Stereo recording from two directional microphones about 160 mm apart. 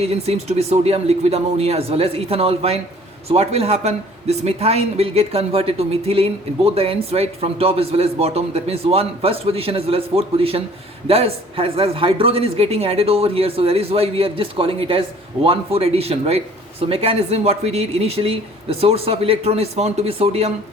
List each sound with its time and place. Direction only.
0.0 s speech: 40° right (ahead or behind)